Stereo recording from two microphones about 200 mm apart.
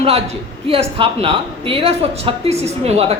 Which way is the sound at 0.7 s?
30° right (ahead or behind).